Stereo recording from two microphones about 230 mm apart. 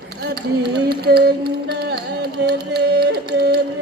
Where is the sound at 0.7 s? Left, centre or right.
Right.